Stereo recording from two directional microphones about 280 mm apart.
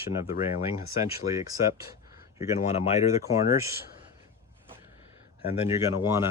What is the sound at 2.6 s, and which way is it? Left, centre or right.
Speech, left.